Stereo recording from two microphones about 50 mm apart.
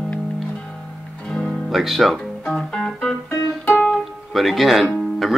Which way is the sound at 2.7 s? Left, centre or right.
Centre.